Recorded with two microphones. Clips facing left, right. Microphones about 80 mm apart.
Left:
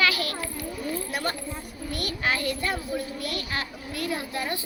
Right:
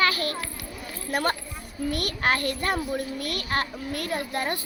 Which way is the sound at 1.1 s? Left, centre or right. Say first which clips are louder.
Right 4 dB; right.